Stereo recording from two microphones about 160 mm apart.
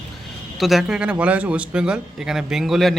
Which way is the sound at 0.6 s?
Centre (ahead or behind).